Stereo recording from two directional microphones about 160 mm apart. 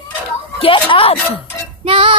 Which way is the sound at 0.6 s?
35° left (ahead or behind).